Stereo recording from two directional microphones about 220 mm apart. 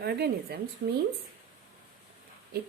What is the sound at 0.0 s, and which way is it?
Speech, 45° right (ahead or behind).